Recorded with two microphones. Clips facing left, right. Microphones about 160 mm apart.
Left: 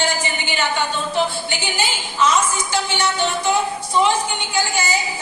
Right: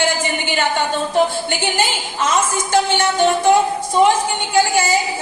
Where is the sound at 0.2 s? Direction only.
50° right (ahead or behind).